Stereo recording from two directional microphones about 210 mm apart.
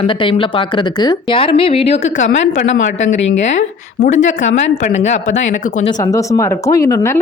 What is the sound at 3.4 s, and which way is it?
Speech, 35° left (ahead or behind).